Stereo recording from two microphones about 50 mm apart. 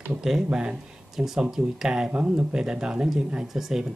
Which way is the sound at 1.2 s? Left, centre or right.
Centre.